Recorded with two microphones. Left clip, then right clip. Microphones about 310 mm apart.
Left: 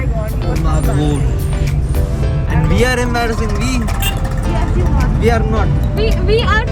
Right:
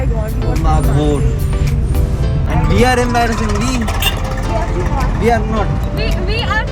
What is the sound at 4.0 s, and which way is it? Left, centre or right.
Music, right.